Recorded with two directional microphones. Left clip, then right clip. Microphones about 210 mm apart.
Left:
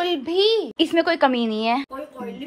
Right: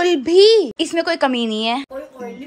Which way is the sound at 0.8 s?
10° right (ahead or behind).